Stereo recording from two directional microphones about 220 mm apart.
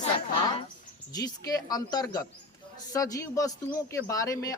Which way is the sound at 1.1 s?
15° left (ahead or behind).